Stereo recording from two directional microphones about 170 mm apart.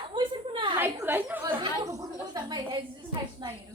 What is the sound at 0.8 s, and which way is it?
Chatter, 10° right (ahead or behind).